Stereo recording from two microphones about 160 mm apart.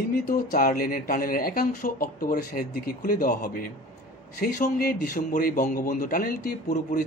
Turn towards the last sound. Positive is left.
turn(degrees=60)  # may be behind; listen again after turning